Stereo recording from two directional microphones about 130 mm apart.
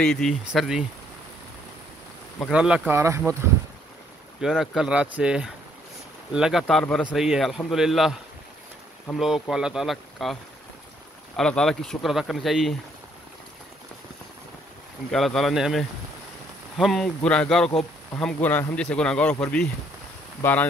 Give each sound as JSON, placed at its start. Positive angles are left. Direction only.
{"t": 0.0, "sound": "speech", "side_deg": 5}
{"t": 2.5, "sound": "speech", "side_deg": -10}
{"t": 2.9, "sound": "speech", "side_deg": -20}
{"t": 4.4, "sound": "speech", "side_deg": 0}
{"t": 11.3, "sound": "speech", "side_deg": 5}
{"t": 15.0, "sound": "speech", "side_deg": 0}